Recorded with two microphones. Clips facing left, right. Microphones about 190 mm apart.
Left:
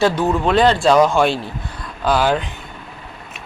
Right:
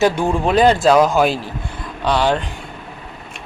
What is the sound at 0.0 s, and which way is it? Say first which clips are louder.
Speech: even; 15° right (ahead or behind).